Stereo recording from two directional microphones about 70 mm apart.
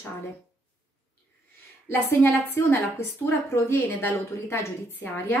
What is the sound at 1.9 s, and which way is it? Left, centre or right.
A woman's voice, left.